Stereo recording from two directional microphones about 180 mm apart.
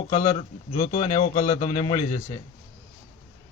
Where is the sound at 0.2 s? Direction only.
40° left (ahead or behind).